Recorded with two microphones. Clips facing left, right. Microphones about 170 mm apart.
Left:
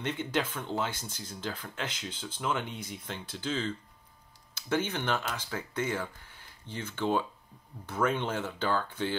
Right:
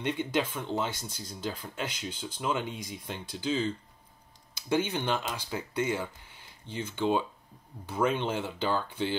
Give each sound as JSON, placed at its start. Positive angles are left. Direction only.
{"t": 0.0, "sound": "speech", "side_deg": -15}